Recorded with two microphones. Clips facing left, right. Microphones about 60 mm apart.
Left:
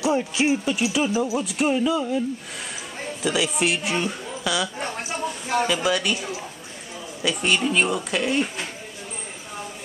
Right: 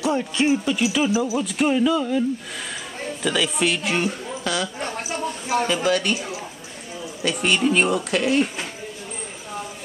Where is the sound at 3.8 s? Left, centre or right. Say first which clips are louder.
Right 2 dB; right.